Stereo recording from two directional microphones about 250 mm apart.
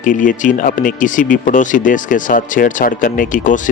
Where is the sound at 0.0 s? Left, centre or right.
Left.